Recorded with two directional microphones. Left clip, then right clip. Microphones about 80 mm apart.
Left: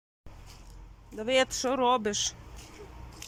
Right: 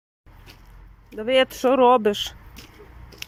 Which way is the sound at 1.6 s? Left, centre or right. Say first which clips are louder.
Right 10 dB; right.